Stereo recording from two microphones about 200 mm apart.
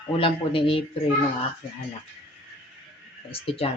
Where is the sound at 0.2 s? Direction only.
25° left (ahead or behind).